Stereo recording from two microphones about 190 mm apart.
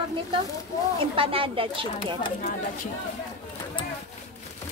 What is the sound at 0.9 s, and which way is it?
Speech, 30° right (ahead or behind).